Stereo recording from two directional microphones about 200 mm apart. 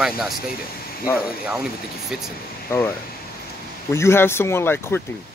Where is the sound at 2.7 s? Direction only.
10° left (ahead or behind).